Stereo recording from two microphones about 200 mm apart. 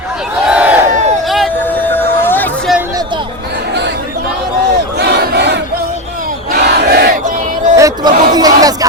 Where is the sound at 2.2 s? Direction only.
10° left (ahead or behind).